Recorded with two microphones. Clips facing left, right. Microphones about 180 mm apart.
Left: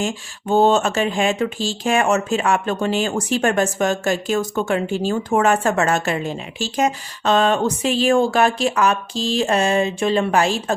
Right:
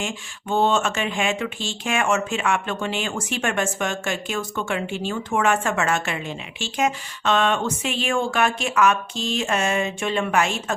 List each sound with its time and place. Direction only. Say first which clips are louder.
0.0 s speech: left 6 dB; 40° left (ahead or behind)